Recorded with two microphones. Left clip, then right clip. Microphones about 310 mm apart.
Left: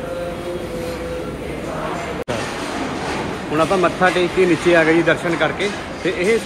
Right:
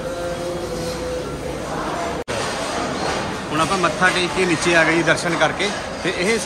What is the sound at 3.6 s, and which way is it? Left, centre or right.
Speech, centre.